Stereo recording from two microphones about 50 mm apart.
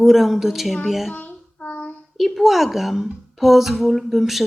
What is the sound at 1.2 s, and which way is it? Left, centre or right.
Child singing, left.